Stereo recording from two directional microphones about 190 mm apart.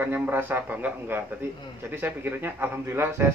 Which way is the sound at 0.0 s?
10° right (ahead or behind).